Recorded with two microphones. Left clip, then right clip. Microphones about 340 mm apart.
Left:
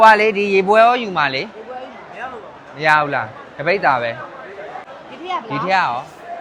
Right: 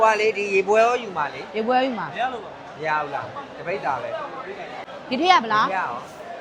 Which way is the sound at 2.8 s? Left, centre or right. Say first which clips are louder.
Left 10 dB; left.